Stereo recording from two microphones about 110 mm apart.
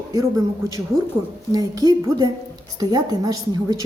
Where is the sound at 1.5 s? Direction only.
35° right (ahead or behind).